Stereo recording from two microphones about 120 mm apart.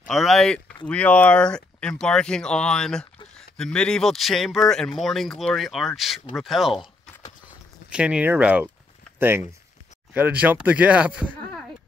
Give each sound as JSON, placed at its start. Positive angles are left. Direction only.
{"t": 0.1, "sound": "speech", "side_deg": 0}
{"t": 7.9, "sound": "speech", "side_deg": -10}